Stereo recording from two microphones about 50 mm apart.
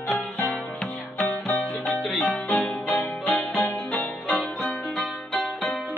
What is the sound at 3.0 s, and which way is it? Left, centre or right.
Music, left.